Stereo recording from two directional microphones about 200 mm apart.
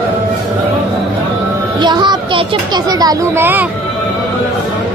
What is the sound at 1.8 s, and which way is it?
Speech, 20° right (ahead or behind).